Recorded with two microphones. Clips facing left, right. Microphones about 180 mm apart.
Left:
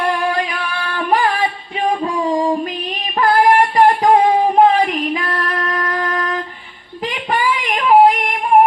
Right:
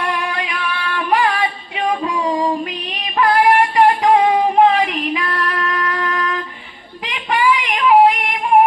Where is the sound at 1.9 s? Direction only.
45° left (ahead or behind).